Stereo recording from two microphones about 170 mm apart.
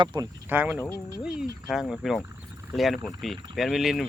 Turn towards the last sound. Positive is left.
turn(degrees=0)  # may be behind; listen again after turning